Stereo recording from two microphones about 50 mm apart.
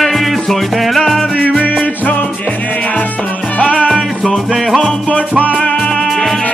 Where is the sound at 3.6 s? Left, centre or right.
Left.